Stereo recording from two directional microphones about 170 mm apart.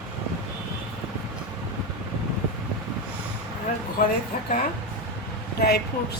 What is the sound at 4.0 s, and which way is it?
Speech, 55° left (ahead or behind).